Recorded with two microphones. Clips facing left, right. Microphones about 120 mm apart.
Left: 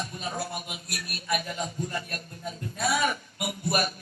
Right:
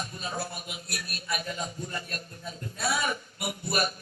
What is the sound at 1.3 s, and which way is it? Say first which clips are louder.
Speech: left 4 dB; 65° left (ahead or behind).